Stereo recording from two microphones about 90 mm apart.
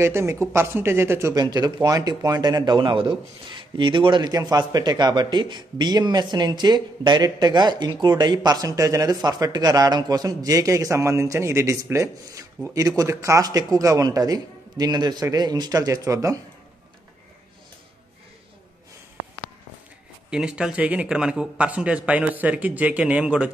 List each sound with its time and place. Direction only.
0.0 s speech: 30° right (ahead or behind)
1.3 s speech: 50° right (ahead or behind); by 4.2 s 65° right (ahead or behind)
4.2 s speech: 45° right (ahead or behind)
20.2 s speech: 10° right (ahead or behind)